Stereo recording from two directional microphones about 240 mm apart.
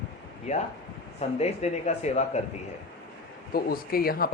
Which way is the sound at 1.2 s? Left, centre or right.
Left.